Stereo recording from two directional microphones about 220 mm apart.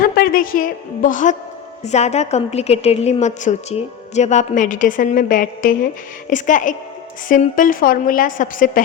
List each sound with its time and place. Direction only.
0.0 s a woman's voice: 40° left (ahead or behind)